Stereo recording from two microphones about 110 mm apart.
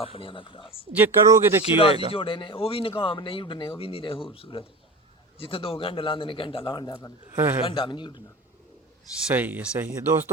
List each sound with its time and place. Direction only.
0.0 s speech: 55° left (ahead or behind)
0.9 s speech: 20° right (ahead or behind)
2.1 s speech: 55° left (ahead or behind)
6.7 s a man's voice: 35° left (ahead or behind)
7.3 s a man's voice: 20° right (ahead or behind)
7.6 s speech: 45° left (ahead or behind)
9.3 s speech: 15° right (ahead or behind)